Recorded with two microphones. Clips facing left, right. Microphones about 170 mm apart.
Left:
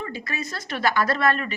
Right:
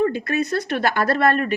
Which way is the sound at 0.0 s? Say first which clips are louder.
Right 11 dB; 55° right (ahead or behind).